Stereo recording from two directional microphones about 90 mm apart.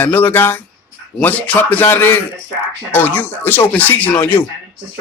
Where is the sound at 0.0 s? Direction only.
20° left (ahead or behind).